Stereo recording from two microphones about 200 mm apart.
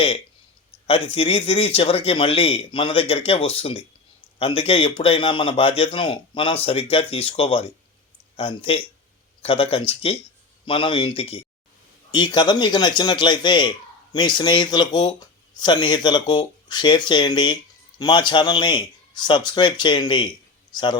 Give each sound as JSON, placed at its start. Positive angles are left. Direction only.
{"t": 0.9, "sound": "speech", "side_deg": 25}